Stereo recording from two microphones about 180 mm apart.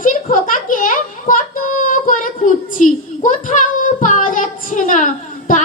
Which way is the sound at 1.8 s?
45° left (ahead or behind).